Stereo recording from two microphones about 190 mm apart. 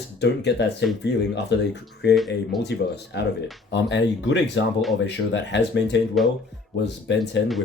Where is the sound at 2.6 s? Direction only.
60° left (ahead or behind).